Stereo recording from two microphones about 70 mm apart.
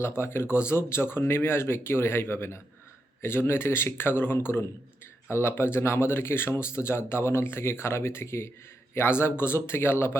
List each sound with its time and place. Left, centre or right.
0.0 s speech: left